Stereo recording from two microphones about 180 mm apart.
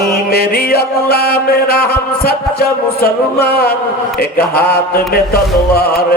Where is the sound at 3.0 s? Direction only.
60° left (ahead or behind).